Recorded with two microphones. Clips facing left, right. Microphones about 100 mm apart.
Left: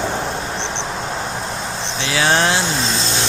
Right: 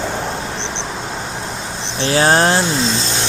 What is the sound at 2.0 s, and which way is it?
Speech, 40° right (ahead or behind).